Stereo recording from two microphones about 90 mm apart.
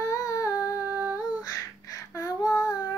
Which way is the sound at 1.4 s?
40° left (ahead or behind).